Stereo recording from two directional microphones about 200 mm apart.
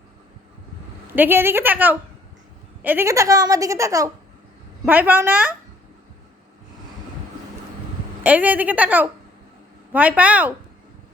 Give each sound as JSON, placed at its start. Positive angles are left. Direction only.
{"t": 1.0, "sound": "a woman's voice", "side_deg": -10}
{"t": 8.2, "sound": "a woman's voice", "side_deg": -10}